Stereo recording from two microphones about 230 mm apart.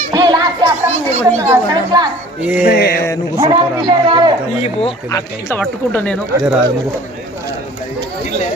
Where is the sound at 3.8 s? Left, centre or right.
Centre.